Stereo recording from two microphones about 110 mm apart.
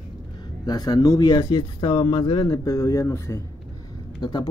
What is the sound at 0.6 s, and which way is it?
Speech, 35° left (ahead or behind).